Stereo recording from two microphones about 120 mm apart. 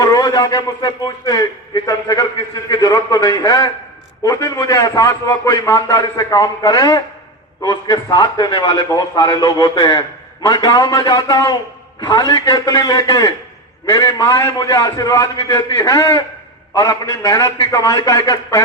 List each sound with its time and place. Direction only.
0.0 s a man's voice: 30° left (ahead or behind)